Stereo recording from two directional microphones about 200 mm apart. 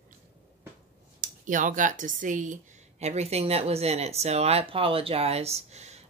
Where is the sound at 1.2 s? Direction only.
40° right (ahead or behind).